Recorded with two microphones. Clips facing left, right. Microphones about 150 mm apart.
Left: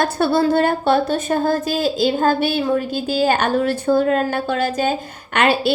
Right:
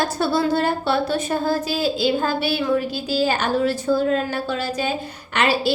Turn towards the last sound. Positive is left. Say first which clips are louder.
# left 3 dB
turn(degrees=55)  # may be behind; listen again after turning